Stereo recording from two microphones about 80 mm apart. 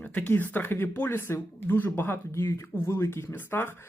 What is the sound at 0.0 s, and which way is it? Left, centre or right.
Speech, centre.